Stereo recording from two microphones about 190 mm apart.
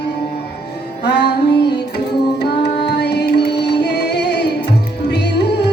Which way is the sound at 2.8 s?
60° left (ahead or behind).